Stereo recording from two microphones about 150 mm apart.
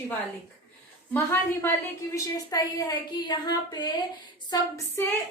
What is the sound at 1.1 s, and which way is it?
A woman's voice, 15° left (ahead or behind).